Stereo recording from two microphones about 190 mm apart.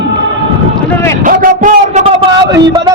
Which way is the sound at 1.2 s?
45° right (ahead or behind).